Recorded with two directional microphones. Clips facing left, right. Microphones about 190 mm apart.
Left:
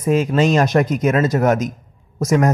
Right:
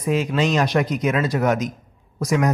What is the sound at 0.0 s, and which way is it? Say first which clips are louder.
A man's voice: left 4 dB; 45° left (ahead or behind).